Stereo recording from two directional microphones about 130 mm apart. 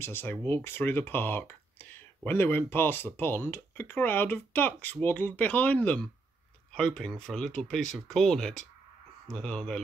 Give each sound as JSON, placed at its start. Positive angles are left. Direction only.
{"t": 0.0, "sound": "speech", "side_deg": 15}